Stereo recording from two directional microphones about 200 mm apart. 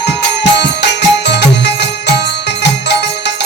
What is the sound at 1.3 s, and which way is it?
Music, 60° left (ahead or behind).